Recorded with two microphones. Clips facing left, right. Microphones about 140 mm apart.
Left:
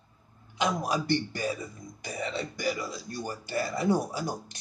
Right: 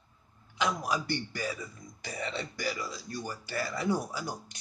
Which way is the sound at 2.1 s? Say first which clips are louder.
Left 3 dB; 10° left (ahead or behind).